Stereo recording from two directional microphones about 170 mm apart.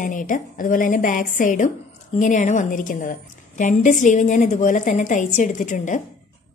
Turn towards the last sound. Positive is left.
turn(degrees=45)  # may be behind; listen again after turning